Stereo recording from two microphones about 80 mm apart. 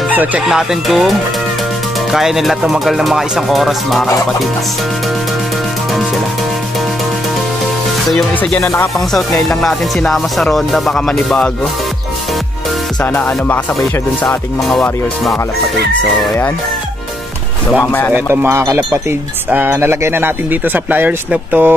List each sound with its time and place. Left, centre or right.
0.1 s chicken: right
0.5 s speech: centre
2.1 s speech: centre
8.5 s speech: left
9.6 s speech: centre
13.0 s music: left
14.2 s speech: centre
18.1 s a man's voice: right